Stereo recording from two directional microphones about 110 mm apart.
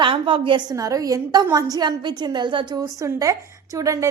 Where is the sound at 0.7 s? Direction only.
30° right (ahead or behind).